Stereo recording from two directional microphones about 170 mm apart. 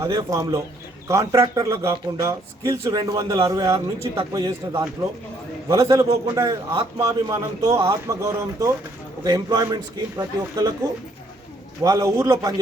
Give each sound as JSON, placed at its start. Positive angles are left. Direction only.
{"t": 0.1, "sound": "a man's voice", "side_deg": -20}
{"t": 11.8, "sound": "a man's voice", "side_deg": -20}